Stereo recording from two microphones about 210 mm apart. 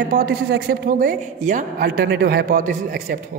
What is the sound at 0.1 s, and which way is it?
A woman's voice, 45° right (ahead or behind).